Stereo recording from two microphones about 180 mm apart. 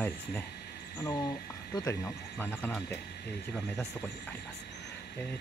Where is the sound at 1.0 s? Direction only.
20° left (ahead or behind).